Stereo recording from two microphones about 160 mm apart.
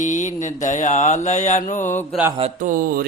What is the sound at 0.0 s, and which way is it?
Mantra, 50° left (ahead or behind).